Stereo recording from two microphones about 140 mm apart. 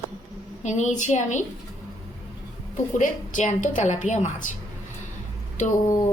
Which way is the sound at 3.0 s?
65° left (ahead or behind).